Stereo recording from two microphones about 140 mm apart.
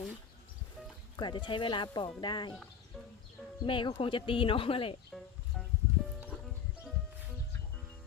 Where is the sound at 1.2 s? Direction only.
35° left (ahead or behind).